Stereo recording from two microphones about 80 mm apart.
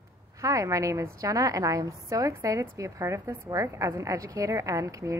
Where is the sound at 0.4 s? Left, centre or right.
Right.